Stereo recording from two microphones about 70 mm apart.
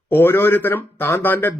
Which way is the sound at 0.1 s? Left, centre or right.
Left.